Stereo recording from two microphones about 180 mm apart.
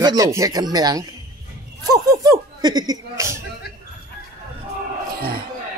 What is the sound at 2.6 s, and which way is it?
Speech, 20° right (ahead or behind).